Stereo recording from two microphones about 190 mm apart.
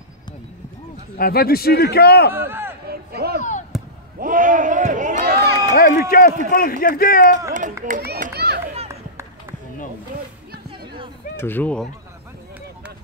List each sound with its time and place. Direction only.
1.1 s a man's voice: 50° left (ahead or behind)
2.3 s speech: 10° right (ahead or behind)
2.9 s a sound: 55° right (ahead or behind)
3.7 s basketball bounce: centre (ahead or behind)
4.2 s speech: 45° right (ahead or behind)
5.3 s run: 55° right (ahead or behind)
5.8 s a man's voice: 50° left (ahead or behind)
7.8 s run: 50° right (ahead or behind)
11.3 s speech: 10° left (ahead or behind)